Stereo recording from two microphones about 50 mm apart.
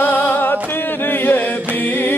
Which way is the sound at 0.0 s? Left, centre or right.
Left.